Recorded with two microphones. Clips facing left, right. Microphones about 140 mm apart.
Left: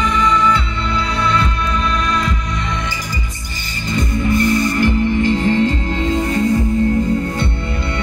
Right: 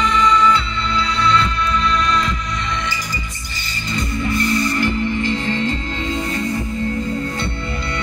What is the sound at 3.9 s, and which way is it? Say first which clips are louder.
Music: left 4 dB; 50° left (ahead or behind).